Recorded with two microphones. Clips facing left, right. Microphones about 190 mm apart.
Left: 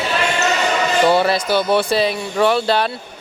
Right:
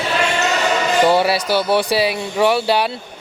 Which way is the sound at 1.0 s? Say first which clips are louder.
Left 1 dB; 10° right (ahead or behind).